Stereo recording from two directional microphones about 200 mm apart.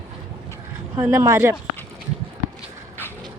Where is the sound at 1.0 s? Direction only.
15° right (ahead or behind).